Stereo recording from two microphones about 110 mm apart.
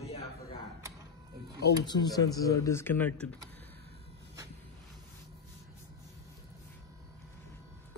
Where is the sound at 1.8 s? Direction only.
40° left (ahead or behind); by 3.3 s 15° left (ahead or behind).